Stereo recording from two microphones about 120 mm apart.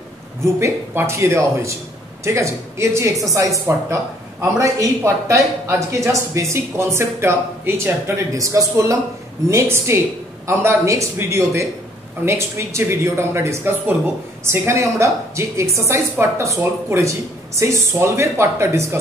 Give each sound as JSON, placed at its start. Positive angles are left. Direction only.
{"t": 0.6, "sound": "speech", "side_deg": -20}
{"t": 17.6, "sound": "speech", "side_deg": -25}